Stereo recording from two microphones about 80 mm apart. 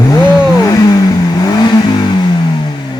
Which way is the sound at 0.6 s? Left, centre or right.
Left.